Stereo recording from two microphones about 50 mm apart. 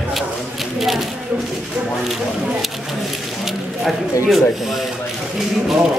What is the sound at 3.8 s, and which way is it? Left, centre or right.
Speech, centre.